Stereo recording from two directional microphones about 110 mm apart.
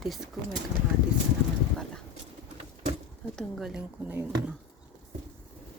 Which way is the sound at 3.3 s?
Centre (ahead or behind).